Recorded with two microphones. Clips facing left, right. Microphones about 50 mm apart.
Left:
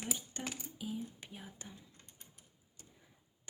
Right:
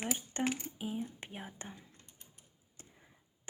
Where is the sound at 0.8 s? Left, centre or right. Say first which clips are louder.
Left 1 dB; right.